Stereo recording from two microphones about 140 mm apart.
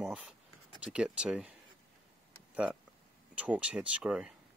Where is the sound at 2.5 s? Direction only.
10° right (ahead or behind).